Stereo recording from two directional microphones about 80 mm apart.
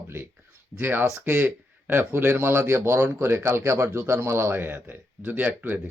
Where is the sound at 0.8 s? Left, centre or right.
Right.